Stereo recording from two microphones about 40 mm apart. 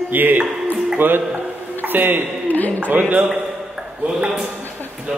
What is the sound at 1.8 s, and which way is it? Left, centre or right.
Speech, right.